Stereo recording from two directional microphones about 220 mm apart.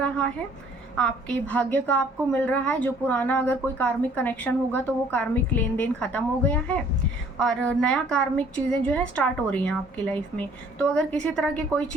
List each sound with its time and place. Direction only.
0.9 s a woman's voice: 5° left (ahead or behind)